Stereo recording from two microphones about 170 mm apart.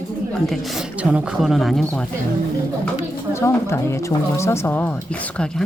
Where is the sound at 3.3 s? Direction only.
15° left (ahead or behind).